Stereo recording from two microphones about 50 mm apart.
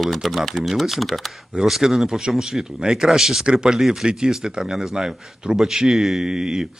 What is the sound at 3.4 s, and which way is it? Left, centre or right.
Speech, centre.